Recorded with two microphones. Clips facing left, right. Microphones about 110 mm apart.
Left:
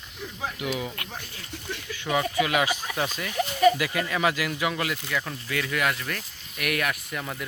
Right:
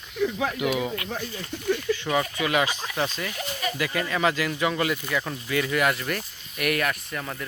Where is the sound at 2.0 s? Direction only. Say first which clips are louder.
Left 6 dB; 5° left (ahead or behind).